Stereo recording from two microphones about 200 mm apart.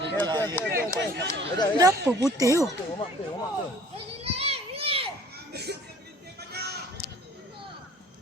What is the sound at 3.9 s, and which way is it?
Children playing, 30° right (ahead or behind).